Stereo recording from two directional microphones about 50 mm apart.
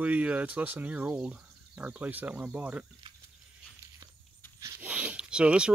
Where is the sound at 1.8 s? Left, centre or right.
Right.